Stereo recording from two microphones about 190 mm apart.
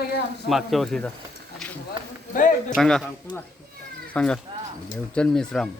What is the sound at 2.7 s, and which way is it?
Speech, centre (ahead or behind).